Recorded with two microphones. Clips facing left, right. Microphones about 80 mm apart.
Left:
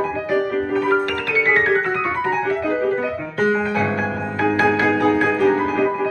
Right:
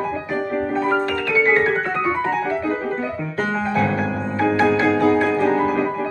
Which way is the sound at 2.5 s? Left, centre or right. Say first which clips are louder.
Left 3 dB; centre.